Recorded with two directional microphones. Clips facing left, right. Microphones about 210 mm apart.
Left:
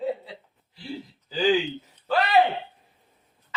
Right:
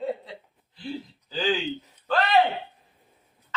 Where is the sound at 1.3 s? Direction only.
10° left (ahead or behind).